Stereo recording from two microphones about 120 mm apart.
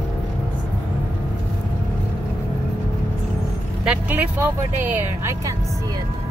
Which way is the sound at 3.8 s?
10° right (ahead or behind).